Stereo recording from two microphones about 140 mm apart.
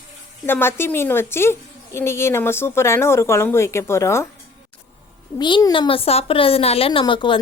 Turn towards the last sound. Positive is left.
turn(degrees=35)  # may be behind; listen again after turning